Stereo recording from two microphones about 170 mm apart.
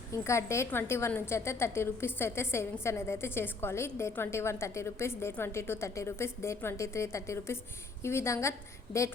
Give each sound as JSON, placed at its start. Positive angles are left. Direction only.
{"t": 0.3, "sound": "a woman's voice", "side_deg": 15}